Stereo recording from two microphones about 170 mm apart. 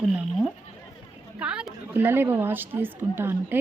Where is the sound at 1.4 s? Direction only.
5° right (ahead or behind).